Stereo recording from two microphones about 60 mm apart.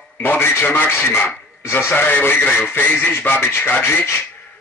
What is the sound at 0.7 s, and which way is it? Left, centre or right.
Speech, left.